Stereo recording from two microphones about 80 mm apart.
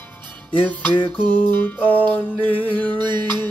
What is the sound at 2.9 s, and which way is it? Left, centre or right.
Music, right.